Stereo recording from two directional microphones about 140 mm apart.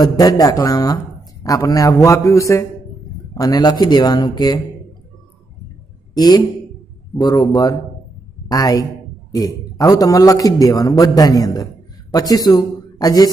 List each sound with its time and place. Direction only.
0.0 s a man's voice: 25° left (ahead or behind)
6.1 s a man's voice: 30° left (ahead or behind)